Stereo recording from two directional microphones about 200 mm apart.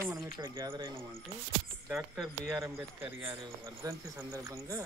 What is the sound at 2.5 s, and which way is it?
Speech, 15° right (ahead or behind).